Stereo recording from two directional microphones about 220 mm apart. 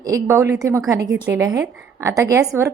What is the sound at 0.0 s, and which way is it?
A woman's voice, 15° right (ahead or behind).